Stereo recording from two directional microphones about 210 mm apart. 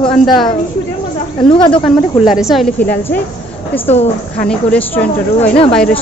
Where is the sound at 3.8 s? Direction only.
30° left (ahead or behind).